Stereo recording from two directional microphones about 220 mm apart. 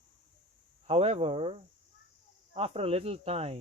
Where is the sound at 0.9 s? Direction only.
25° right (ahead or behind).